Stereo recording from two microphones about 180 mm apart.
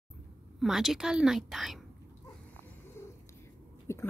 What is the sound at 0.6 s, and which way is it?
A woman's voice, centre (ahead or behind).